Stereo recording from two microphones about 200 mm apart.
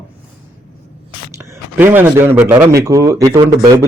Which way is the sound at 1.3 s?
10° right (ahead or behind).